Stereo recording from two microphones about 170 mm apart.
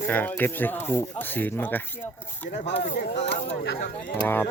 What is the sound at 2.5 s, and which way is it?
Speech, 45° left (ahead or behind).